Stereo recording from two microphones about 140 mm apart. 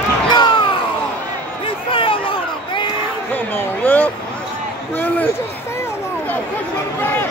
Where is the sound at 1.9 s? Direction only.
40° left (ahead or behind).